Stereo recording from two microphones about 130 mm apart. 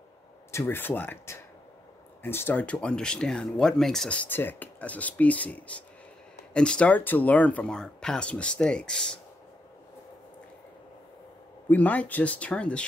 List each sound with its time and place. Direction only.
0.5 s speech: 20° left (ahead or behind)
11.7 s speech: 10° left (ahead or behind)